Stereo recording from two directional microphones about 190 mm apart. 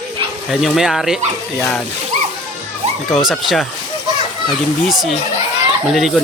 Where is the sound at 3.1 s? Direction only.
Centre (ahead or behind).